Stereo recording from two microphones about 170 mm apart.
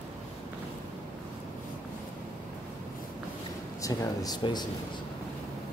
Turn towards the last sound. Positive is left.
turn(degrees=25)  # may be behind; listen again after turning